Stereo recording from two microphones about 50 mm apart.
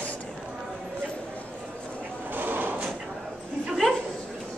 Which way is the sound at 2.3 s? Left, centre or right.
Right.